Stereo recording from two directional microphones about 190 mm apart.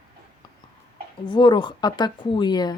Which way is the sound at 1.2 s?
25° left (ahead or behind).